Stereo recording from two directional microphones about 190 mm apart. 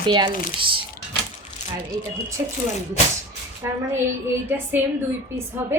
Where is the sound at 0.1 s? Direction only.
25° right (ahead or behind).